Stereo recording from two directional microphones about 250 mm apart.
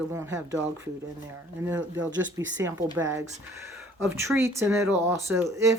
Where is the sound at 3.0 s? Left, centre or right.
Centre.